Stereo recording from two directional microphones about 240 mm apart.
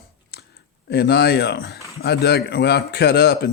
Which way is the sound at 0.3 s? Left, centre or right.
Left.